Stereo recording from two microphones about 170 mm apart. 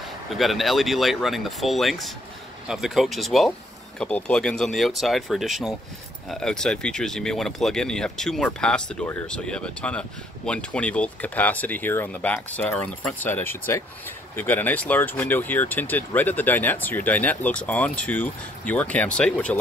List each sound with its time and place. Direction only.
0.3 s speech: centre (ahead or behind)